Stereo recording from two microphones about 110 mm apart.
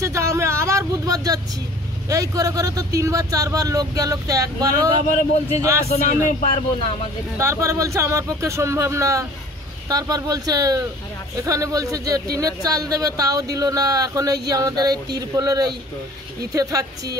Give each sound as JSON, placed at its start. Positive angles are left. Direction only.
{"t": 0.0, "sound": "vehicle", "side_deg": -25}
{"t": 2.0, "sound": "speech", "side_deg": -35}
{"t": 7.3, "sound": "speech", "side_deg": -25}